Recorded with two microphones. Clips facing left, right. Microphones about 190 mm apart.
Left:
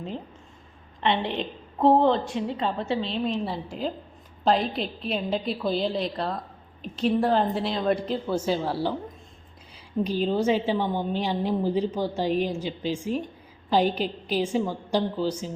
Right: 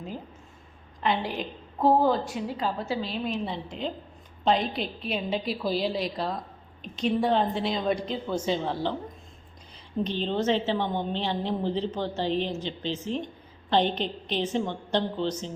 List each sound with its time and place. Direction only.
1.0 s a woman's voice: centre (ahead or behind)
1.3 s a woman's voice: 25° left (ahead or behind)
2.0 s a woman's voice: 5° right (ahead or behind)
3.0 s a woman's voice: 30° left (ahead or behind)
3.4 s a woman's voice: 5° left (ahead or behind)
10.0 s a woman's voice: 10° left (ahead or behind)